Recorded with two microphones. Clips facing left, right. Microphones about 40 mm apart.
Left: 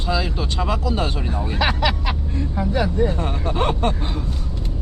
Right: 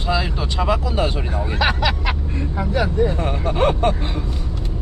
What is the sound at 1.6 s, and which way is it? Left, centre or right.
Speech, centre.